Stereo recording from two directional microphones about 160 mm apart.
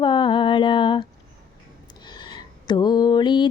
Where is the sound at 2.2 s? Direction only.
25° left (ahead or behind).